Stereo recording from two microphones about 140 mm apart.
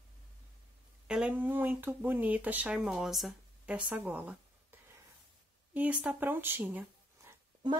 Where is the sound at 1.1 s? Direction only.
10° right (ahead or behind).